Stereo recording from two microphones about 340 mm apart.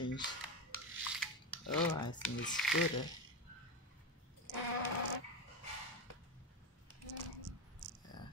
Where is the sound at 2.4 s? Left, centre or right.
Centre.